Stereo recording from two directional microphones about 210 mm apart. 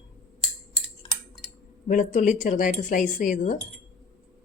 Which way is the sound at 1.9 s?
35° left (ahead or behind).